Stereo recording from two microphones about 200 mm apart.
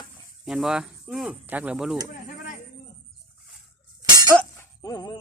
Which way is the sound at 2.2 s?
40° left (ahead or behind).